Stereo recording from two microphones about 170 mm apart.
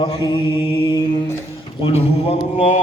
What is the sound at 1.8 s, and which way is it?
Speech, 35° left (ahead or behind).